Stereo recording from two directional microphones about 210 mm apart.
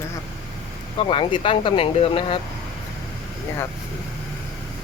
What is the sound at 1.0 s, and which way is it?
Speech, 25° left (ahead or behind).